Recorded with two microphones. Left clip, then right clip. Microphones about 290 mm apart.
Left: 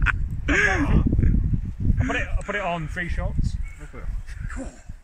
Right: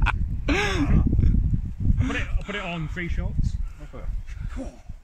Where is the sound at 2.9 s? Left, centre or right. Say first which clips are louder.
Left 3 dB; centre.